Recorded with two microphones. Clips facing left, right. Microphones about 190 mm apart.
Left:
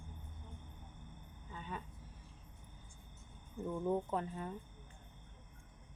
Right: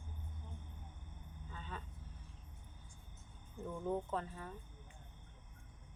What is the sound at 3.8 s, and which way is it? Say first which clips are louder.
Speech: left 2 dB; 15° left (ahead or behind).